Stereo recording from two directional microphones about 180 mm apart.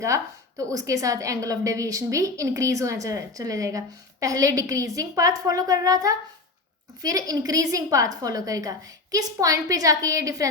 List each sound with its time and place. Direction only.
0.0 s a woman's voice: 15° right (ahead or behind)